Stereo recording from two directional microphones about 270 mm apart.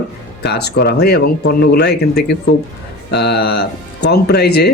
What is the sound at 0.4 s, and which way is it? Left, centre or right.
Speech, left.